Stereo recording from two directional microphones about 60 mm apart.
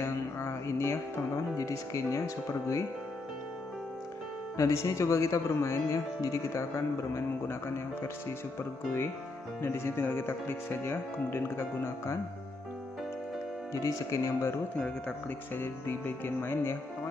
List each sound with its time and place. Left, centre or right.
0.0 s music: left
1.6 s speech: left
4.6 s speech: left
9.6 s speech: left
13.7 s speech: left
15.5 s speech: left